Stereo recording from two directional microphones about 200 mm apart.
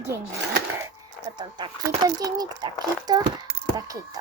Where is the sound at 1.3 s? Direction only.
20° right (ahead or behind).